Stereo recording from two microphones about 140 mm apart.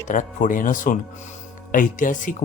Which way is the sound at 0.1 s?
70° left (ahead or behind).